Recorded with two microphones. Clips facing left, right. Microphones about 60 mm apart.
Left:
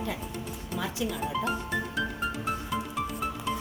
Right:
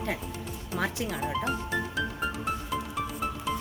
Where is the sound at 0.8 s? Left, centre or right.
Right.